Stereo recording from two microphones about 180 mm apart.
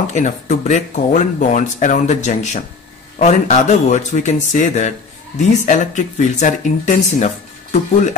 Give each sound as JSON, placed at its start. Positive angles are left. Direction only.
{"t": 0.0, "sound": "speech", "side_deg": 40}